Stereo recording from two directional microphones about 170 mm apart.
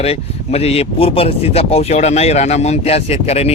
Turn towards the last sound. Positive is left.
turn(degrees=35)  # may be behind; listen again after turning